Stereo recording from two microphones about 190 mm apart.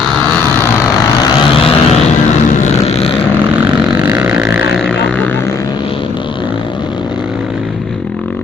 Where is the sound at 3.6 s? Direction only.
10° right (ahead or behind).